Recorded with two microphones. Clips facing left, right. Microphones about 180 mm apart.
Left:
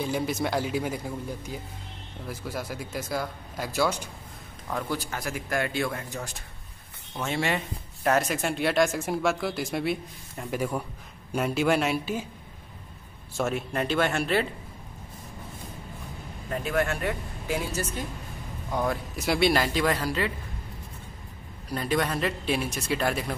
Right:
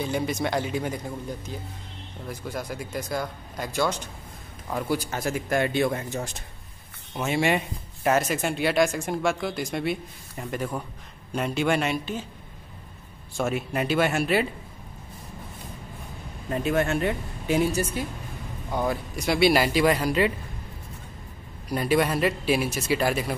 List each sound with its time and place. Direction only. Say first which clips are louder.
0.0 s speech: right 1 dB; centre (ahead or behind)
4.6 s speech: right 3 dB; 10° right (ahead or behind)
5.1 s speech: right 4 dB; 25° right (ahead or behind)
7.2 s speech: right 4 dB; 10° right (ahead or behind)
8.1 s speech: right 1 dB; centre (ahead or behind)
13.4 s speech: right 1 dB; 5° right (ahead or behind)
16.4 s speech: right 3 dB; 25° right (ahead or behind)
18.7 s speech: right 1 dB; centre (ahead or behind)
21.6 s speech: right 4 dB; 10° right (ahead or behind)